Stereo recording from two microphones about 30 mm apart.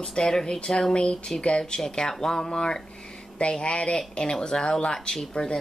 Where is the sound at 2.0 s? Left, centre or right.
Centre.